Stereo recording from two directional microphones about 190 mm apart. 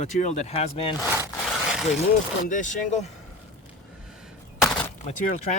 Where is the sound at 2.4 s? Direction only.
40° left (ahead or behind).